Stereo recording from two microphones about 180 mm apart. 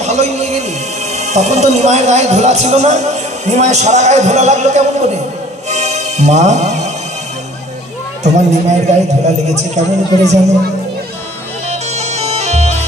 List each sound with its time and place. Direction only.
0.0 s a man's voice: 40° right (ahead or behind)
5.7 s music: 40° right (ahead or behind)
8.2 s speech: 40° right (ahead or behind)
11.7 s bagpipes: 35° right (ahead or behind)